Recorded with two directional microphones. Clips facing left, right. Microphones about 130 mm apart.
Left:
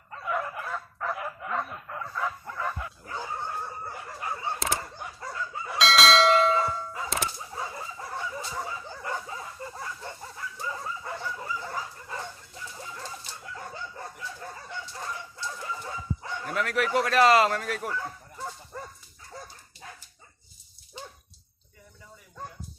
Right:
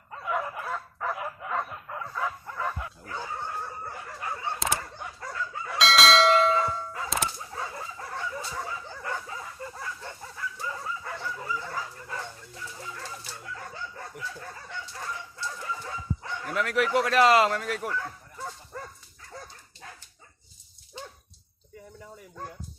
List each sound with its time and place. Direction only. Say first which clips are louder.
0.1 s dog: even; 10° right (ahead or behind)
3.1 s dog: left 1 dB; 10° left (ahead or behind)
5.2 s chicken: even; 15° left (ahead or behind)
5.7 s church bell: even; centre (ahead or behind); by 10.7 s 20° left (ahead or behind)
10.7 s bow-wow: left 3 dB; 15° left (ahead or behind)
12.7 s pigeon: left 1 dB; 15° left (ahead or behind)
13.6 s chicken: left 4 dB; 25° left (ahead or behind)
16.6 s speech: right 1 dB; 15° right (ahead or behind)
17.4 s speech: even; centre (ahead or behind)
17.8 s bow-wow: even; 15° left (ahead or behind)